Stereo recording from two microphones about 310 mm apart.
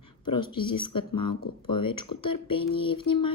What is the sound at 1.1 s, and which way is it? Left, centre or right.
Speech, left.